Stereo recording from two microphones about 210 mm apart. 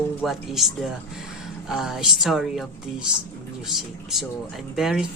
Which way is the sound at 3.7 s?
Centre (ahead or behind).